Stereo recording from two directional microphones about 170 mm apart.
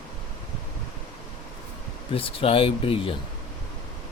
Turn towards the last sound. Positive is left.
turn(degrees=35)  # may be behind; listen again after turning